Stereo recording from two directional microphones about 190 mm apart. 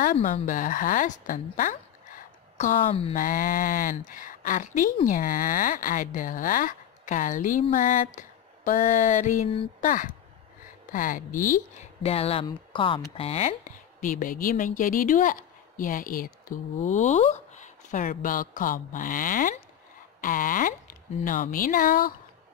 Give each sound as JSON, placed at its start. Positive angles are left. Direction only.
{"t": 0.0, "sound": "speech", "side_deg": 45}
{"t": 2.9, "sound": "speech", "side_deg": 30}
{"t": 3.2, "sound": "speech", "side_deg": 45}
{"t": 7.7, "sound": "a sound", "side_deg": 45}
{"t": 9.8, "sound": "speech", "side_deg": 45}
{"t": 12.0, "sound": "speech", "side_deg": 30}
{"t": 14.0, "sound": "speech", "side_deg": 45}